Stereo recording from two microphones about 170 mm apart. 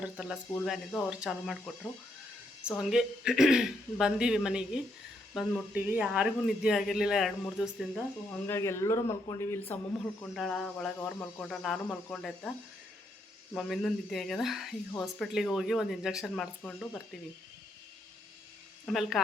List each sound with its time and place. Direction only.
0.0 s speech: 5° right (ahead or behind)
5.7 s speech: 10° right (ahead or behind)
8.3 s speech: 15° left (ahead or behind)
10.3 s speech: centre (ahead or behind)
18.9 s speech: centre (ahead or behind)